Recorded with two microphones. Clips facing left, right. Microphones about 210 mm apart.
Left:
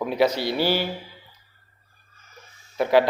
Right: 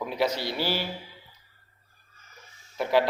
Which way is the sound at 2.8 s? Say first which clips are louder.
Left 5 dB; 70° left (ahead or behind).